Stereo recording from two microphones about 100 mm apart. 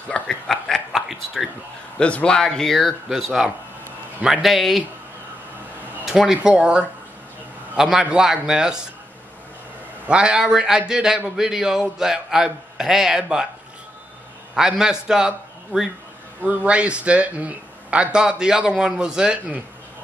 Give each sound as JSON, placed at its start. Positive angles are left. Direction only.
{"t": 0.1, "sound": "a sound", "side_deg": 5}
{"t": 2.0, "sound": "a man's voice", "side_deg": 10}
{"t": 6.0, "sound": "a man's voice", "side_deg": -5}
{"t": 10.0, "sound": "a man's voice", "side_deg": -10}
{"t": 14.5, "sound": "a man's voice", "side_deg": -5}